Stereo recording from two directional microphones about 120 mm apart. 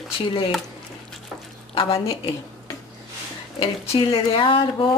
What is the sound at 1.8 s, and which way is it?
Speech, 50° left (ahead or behind).